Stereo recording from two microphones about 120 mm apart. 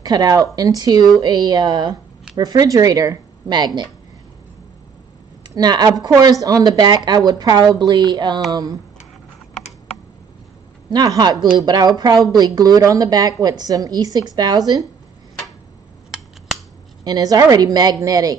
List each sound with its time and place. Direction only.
0.0 s speech: 35° right (ahead or behind)
5.5 s speech: 35° right (ahead or behind)
10.9 s speech: 35° right (ahead or behind)
16.1 s scissors: 5° right (ahead or behind)
17.0 s speech: 35° right (ahead or behind)